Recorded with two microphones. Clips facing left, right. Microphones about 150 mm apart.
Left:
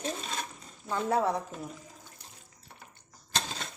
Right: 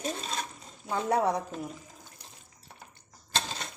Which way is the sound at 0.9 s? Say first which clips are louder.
Right 1 dB; 20° right (ahead or behind).